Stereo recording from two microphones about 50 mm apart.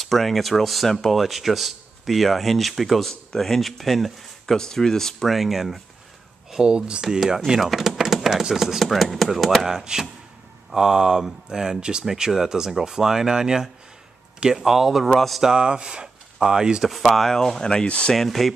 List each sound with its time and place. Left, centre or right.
0.0 s speech: centre
6.6 s speech: centre
15.4 s speech: centre
16.8 s speech: centre
17.8 s speech: left
18.1 s speech: centre